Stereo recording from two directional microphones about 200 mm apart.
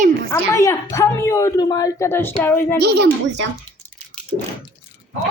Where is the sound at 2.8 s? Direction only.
55° right (ahead or behind).